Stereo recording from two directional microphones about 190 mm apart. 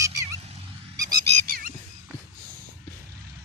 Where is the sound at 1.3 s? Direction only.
50° right (ahead or behind).